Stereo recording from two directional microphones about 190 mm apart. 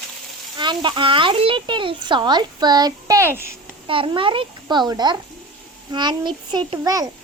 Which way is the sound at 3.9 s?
25° right (ahead or behind).